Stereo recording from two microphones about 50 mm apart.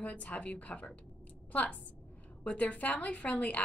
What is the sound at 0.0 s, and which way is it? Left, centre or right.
A woman's voice, left.